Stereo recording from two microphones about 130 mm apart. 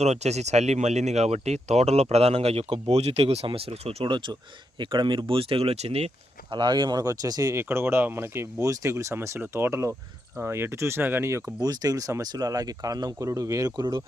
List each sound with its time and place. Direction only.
0.0 s speech: 60° right (ahead or behind)
6.5 s speech: 35° right (ahead or behind)